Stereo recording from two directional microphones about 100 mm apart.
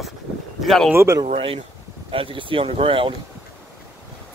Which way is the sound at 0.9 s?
25° right (ahead or behind).